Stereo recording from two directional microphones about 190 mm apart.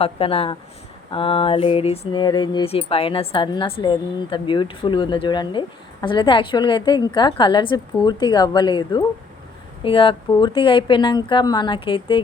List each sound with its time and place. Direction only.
0.0 s speech: 30° left (ahead or behind)
1.1 s mantra: 30° left (ahead or behind)